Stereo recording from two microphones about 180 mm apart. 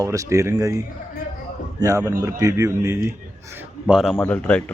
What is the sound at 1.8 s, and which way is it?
Speech, 15° right (ahead or behind).